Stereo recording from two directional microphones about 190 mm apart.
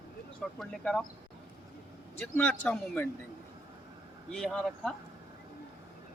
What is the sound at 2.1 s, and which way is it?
Speech, 10° left (ahead or behind).